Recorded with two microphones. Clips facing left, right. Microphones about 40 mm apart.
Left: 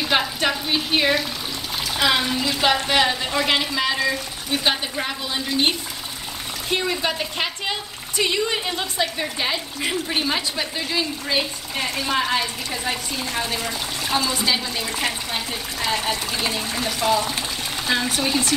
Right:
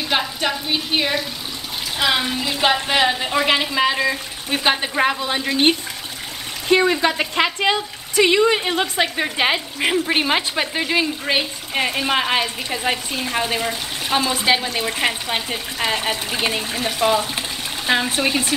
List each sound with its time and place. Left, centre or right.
0.1 s frying: centre
2.0 s a woman's voice: centre; by 4.6 s right
4.9 s speech: right
6.7 s speech: right
12.9 s speech: right